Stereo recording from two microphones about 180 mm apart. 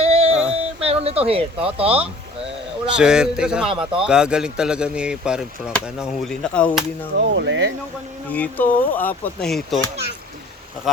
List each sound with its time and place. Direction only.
0.0 s music: 35° right (ahead or behind)
0.5 s a sound: 35° right (ahead or behind)
2.8 s speech: 5° right (ahead or behind)
7.2 s speech: 90° right
8.3 s speech: 10° left (ahead or behind)